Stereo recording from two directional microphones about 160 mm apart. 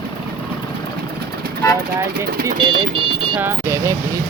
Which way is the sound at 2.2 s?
65° right (ahead or behind).